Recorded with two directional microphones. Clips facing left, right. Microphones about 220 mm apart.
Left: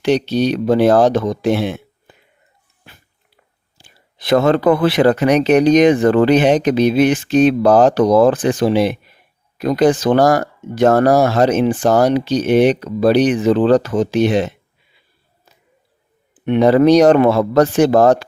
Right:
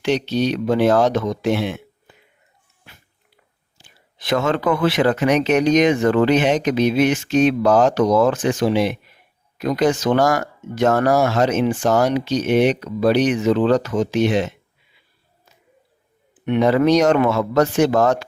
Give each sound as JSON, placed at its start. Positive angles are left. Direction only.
{"t": 0.0, "sound": "speech", "side_deg": 35}
{"t": 2.8, "sound": "a sound", "side_deg": 35}
{"t": 3.8, "sound": "speech", "side_deg": 35}
{"t": 16.5, "sound": "speech", "side_deg": 35}